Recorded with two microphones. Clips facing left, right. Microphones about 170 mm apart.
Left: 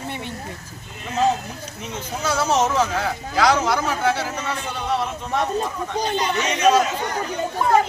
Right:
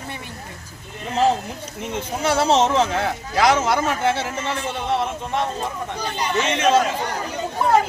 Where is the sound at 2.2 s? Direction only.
30° right (ahead or behind).